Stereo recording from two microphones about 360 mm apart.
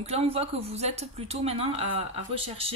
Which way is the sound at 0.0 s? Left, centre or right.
Centre.